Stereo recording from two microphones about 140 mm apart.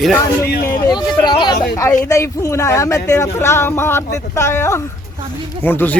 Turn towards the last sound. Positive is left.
turn(degrees=15)  # may be behind; listen again after turning